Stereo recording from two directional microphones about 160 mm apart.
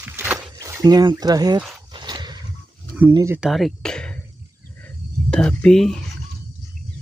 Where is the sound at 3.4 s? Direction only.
Centre (ahead or behind).